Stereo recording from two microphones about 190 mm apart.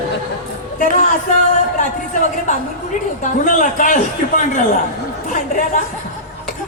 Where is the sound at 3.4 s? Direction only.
45° left (ahead or behind).